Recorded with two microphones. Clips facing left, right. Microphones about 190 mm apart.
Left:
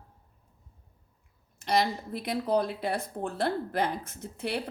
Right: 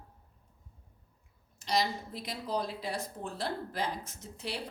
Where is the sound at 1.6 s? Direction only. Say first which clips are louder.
Left 4 dB; 55° left (ahead or behind).